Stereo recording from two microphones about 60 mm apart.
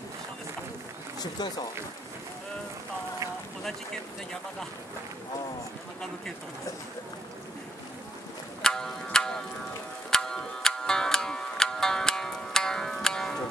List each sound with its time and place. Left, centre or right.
8.6 s music: centre